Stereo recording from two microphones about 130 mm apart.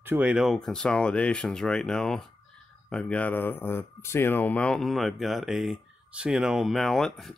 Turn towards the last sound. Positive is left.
turn(degrees=0)  # may be behind; listen again after turning